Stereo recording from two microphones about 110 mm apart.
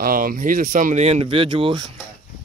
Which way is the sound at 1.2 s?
50° right (ahead or behind).